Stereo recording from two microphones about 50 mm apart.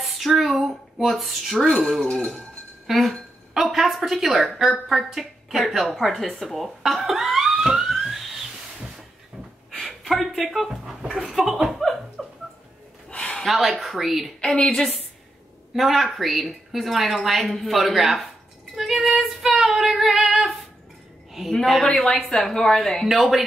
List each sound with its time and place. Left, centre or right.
0.0 s a woman's voice: centre
9.7 s a sound: centre
11.1 s chuckle: centre
13.1 s a sound: centre
13.5 s a woman's voice: centre
14.4 s a woman's voice: centre
15.7 s a woman's voice: centre
18.8 s music: centre
19.5 s child singing: centre
21.3 s a sound: centre
21.9 s a woman's voice: centre
23.0 s a woman's voice: centre